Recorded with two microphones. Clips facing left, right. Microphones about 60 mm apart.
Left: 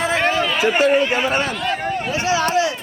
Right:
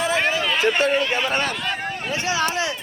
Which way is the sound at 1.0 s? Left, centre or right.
Left.